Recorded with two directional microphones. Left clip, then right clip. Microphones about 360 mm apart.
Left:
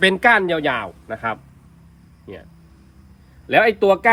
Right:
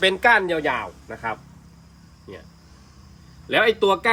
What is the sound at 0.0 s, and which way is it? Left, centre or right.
Speech, left.